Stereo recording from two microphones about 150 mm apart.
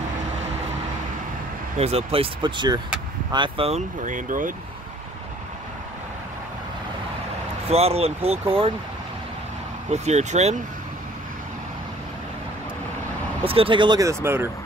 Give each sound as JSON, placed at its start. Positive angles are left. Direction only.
{"t": 1.8, "sound": "speech", "side_deg": -45}
{"t": 4.0, "sound": "speech", "side_deg": -60}
{"t": 7.7, "sound": "speech", "side_deg": -45}
{"t": 9.8, "sound": "speech", "side_deg": -50}
{"t": 13.4, "sound": "speech", "side_deg": -35}